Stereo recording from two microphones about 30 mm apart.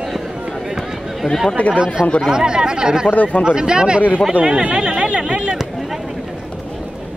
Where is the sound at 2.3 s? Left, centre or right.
Right.